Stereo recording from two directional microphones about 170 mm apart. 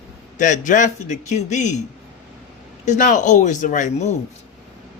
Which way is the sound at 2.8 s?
50° left (ahead or behind).